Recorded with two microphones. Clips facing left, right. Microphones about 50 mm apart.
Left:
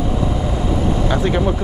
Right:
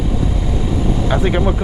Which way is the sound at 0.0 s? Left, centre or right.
Centre.